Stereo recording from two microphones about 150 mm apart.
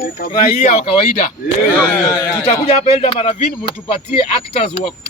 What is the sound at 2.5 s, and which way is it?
Speech, 45° left (ahead or behind).